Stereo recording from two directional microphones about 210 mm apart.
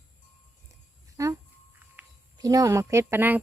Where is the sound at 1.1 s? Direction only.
15° right (ahead or behind).